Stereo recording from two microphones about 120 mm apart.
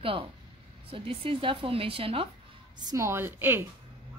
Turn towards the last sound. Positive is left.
turn(degrees=-15)  # may be behind; listen again after turning